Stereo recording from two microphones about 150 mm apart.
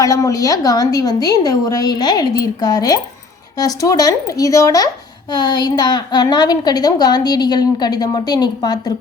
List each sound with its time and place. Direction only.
0.0 s a woman's voice: 20° left (ahead or behind)